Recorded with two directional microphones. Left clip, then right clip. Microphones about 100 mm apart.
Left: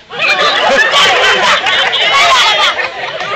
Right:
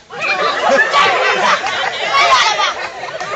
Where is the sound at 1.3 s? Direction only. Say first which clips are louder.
Left 5 dB; 15° left (ahead or behind).